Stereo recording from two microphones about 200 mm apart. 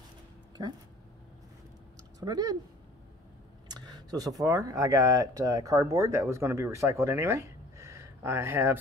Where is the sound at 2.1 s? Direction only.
20° right (ahead or behind).